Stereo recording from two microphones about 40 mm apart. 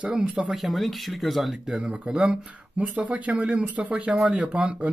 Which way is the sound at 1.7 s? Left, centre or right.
Right.